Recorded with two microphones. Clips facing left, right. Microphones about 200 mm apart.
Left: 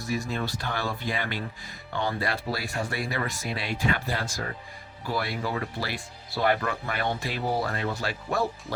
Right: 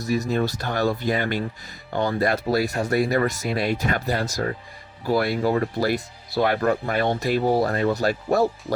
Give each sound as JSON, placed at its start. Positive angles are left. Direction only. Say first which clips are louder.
{"t": 0.0, "sound": "speech", "louder": "right 7 dB", "side_deg": -40}